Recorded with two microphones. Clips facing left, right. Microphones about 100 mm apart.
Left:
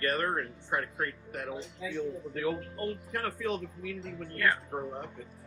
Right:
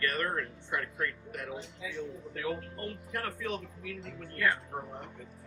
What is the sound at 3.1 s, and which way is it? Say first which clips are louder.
Speech: left 1 dB; 30° left (ahead or behind).